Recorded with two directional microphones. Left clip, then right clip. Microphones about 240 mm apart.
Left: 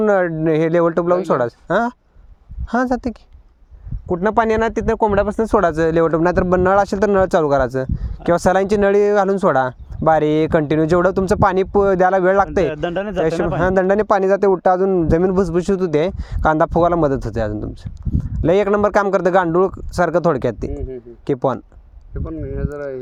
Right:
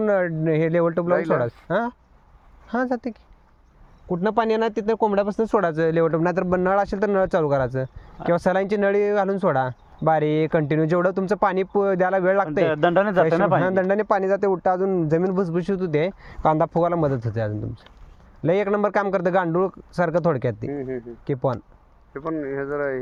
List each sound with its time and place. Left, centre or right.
0.0 s speech: left
4.9 s speech: left
12.6 s speech: centre
13.6 s speech: left
22.1 s speech: centre